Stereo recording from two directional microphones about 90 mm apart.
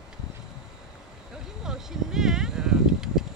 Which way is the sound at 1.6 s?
5° right (ahead or behind).